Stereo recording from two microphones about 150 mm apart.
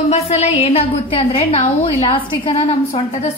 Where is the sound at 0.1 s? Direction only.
45° left (ahead or behind).